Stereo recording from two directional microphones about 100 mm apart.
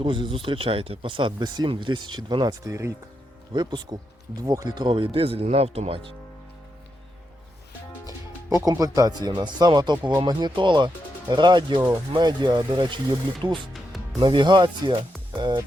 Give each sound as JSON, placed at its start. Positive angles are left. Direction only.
{"t": 0.0, "sound": "speech", "side_deg": -60}
{"t": 3.5, "sound": "speech", "side_deg": -45}
{"t": 5.1, "sound": "speech", "side_deg": -75}
{"t": 8.4, "sound": "speech", "side_deg": -35}